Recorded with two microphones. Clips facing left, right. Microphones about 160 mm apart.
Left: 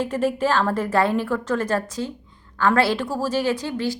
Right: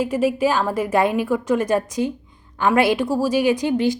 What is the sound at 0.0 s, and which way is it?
A woman's voice, 10° right (ahead or behind).